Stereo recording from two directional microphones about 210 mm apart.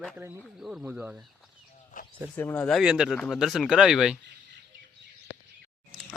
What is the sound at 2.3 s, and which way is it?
Speech, 10° left (ahead or behind).